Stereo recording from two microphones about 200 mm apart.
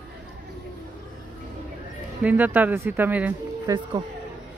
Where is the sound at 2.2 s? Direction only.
10° right (ahead or behind).